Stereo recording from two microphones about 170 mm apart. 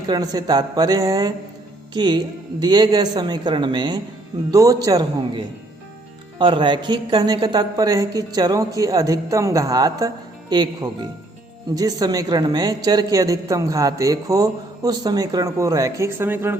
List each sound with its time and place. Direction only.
0.1 s a man's voice: 20° right (ahead or behind)